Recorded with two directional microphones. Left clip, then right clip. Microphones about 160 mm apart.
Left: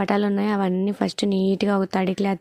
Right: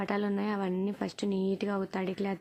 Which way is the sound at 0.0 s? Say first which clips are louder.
Left 10 dB; 50° left (ahead or behind).